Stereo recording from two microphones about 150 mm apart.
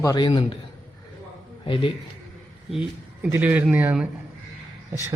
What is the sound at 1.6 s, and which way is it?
Speech, 35° left (ahead or behind).